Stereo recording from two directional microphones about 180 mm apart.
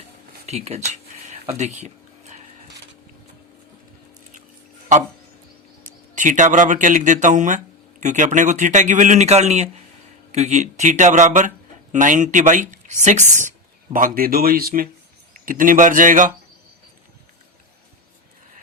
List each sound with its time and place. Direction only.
0.4 s speech: 35° right (ahead or behind)
0.9 s a sound: 40° right (ahead or behind)
5.8 s a man's voice: 45° right (ahead or behind)